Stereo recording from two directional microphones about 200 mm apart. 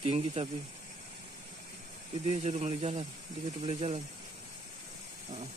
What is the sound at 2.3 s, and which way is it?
Speech, 30° right (ahead or behind).